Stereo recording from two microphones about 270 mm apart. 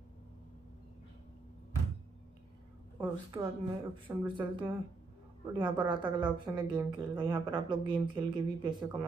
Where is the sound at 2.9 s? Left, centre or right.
Centre.